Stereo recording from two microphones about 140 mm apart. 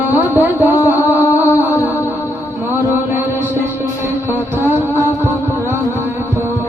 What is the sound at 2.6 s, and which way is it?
Music, 15° right (ahead or behind).